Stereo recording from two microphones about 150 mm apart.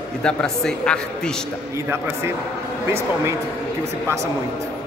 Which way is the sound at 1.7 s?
15° right (ahead or behind).